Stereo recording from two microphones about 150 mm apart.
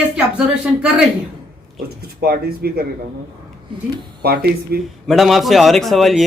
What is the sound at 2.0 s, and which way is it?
Speech, 90° right.